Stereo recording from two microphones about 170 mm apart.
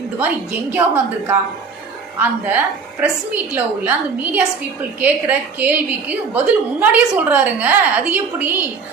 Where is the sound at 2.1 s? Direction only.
10° right (ahead or behind).